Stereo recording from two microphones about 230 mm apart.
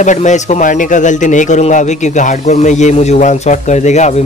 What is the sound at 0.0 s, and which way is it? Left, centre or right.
A man's voice, left.